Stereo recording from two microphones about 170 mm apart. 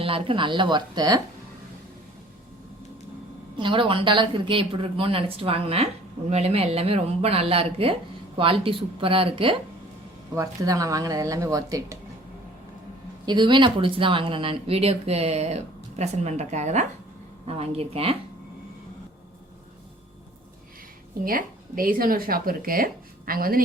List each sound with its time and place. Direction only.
0.0 s a woman's voice: 30° right (ahead or behind)
3.6 s speech: 30° right (ahead or behind)
10.3 s a woman's voice: 20° right (ahead or behind)
13.2 s speech: 25° right (ahead or behind)
21.2 s speech: 55° right (ahead or behind)